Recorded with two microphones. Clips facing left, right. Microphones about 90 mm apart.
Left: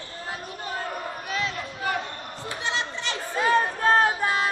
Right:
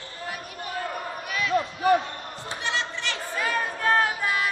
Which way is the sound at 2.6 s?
20° left (ahead or behind).